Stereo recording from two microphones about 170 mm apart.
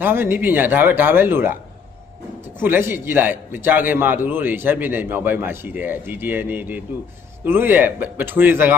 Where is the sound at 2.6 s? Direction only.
10° right (ahead or behind).